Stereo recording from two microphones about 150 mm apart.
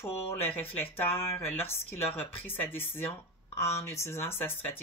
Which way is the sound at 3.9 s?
15° left (ahead or behind).